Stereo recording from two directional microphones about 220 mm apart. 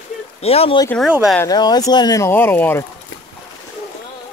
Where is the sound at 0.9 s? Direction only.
Centre (ahead or behind).